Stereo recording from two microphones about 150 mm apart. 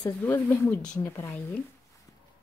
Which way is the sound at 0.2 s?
15° left (ahead or behind).